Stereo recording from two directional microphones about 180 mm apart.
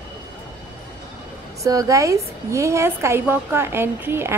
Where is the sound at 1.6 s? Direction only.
20° right (ahead or behind).